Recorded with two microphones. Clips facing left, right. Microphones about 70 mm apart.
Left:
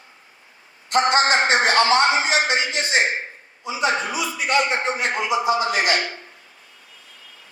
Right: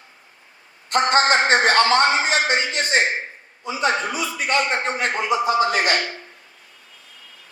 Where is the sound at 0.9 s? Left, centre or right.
Right.